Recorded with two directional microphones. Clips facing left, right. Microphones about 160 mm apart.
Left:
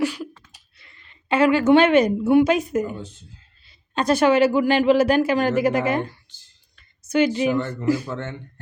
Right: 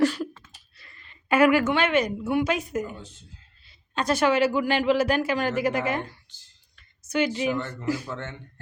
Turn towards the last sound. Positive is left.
turn(degrees=25)  # may be behind; listen again after turning